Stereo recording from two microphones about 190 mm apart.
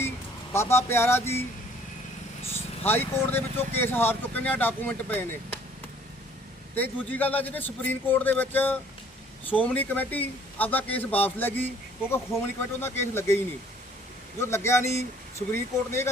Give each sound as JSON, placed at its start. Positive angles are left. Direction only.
{"t": 0.5, "sound": "speech", "side_deg": 15}
{"t": 2.4, "sound": "vehicle", "side_deg": 30}
{"t": 2.8, "sound": "speech", "side_deg": 10}
{"t": 6.7, "sound": "speech", "side_deg": 10}
{"t": 12.8, "sound": "speech", "side_deg": 10}